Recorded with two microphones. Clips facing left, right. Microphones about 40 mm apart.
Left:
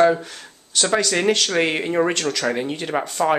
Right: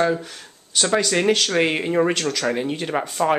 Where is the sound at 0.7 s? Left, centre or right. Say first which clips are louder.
Even; centre.